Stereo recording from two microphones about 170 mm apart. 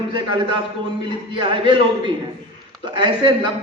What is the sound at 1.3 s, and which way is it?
Speech, 30° right (ahead or behind).